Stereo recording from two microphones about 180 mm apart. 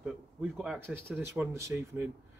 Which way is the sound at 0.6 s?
10° right (ahead or behind).